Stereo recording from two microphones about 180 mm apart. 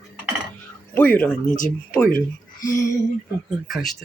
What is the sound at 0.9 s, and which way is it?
Speech, 10° left (ahead or behind).